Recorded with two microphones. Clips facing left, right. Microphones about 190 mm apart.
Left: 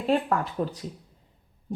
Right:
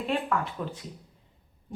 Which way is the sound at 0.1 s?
40° left (ahead or behind).